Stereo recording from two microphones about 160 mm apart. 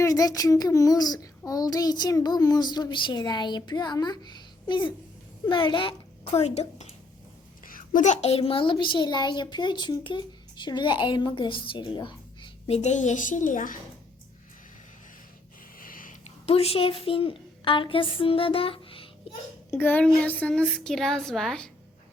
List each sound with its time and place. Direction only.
0.0 s child singing: 20° left (ahead or behind)
5.5 s a child's voice: 30° left (ahead or behind)
6.3 s a child's voice: 40° left (ahead or behind)
7.6 s a child's voice: 60° left (ahead or behind)
15.8 s a sound: 60° left (ahead or behind)
16.5 s a child's voice: 40° left (ahead or behind)
19.7 s a woman's voice: 10° left (ahead or behind)